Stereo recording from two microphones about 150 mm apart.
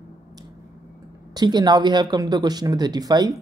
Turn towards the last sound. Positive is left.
turn(degrees=-30)  # may be behind; listen again after turning